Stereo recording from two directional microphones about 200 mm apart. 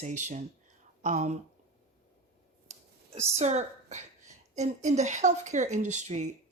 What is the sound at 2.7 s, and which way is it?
Clicking, 30° right (ahead or behind).